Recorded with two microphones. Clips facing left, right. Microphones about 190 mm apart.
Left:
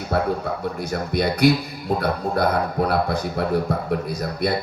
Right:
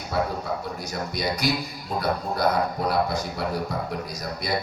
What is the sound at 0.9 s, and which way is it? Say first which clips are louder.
A man's voice: left 6 dB; 55° left (ahead or behind).